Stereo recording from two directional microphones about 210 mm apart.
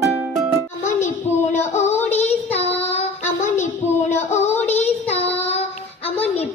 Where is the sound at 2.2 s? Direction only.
30° left (ahead or behind).